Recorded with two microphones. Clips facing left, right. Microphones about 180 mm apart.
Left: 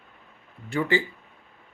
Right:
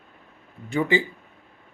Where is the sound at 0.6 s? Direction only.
20° right (ahead or behind).